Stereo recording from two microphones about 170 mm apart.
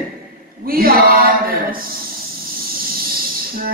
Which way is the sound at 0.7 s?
60° right (ahead or behind).